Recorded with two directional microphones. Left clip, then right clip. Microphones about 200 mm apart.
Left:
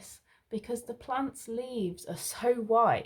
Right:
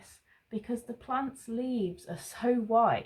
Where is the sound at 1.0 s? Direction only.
45° left (ahead or behind).